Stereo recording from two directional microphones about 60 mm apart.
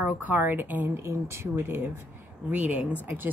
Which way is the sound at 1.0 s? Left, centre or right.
Right.